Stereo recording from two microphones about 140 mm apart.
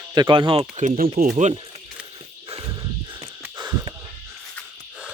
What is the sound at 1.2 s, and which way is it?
Speech, 60° right (ahead or behind).